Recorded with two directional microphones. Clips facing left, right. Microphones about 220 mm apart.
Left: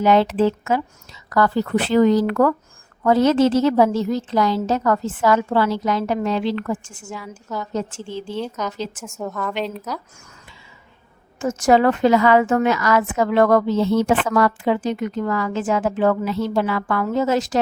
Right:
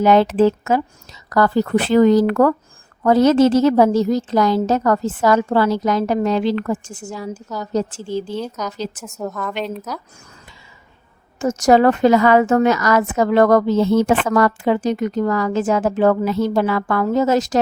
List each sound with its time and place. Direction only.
0.0 s a woman's voice: 45° right (ahead or behind)
8.4 s a woman's voice: centre (ahead or behind)
11.3 s a woman's voice: 40° right (ahead or behind)